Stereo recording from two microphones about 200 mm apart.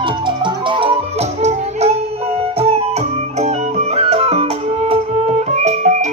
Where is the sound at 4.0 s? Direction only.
30° right (ahead or behind).